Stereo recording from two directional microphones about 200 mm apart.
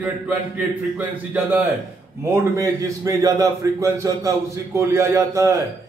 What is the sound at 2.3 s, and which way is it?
A man's voice, 15° right (ahead or behind).